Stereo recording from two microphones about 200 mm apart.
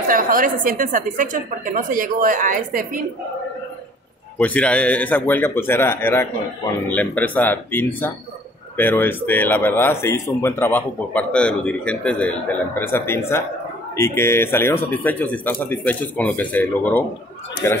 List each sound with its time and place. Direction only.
0.1 s a woman's voice: 45° right (ahead or behind)
4.4 s speech: 5° left (ahead or behind)